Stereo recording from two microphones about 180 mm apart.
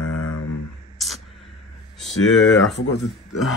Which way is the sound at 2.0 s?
Centre (ahead or behind).